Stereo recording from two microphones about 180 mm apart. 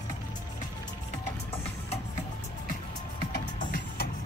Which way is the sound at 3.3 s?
60° left (ahead or behind).